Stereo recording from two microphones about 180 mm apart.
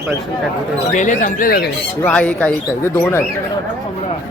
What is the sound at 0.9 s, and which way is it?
Speech, 45° left (ahead or behind).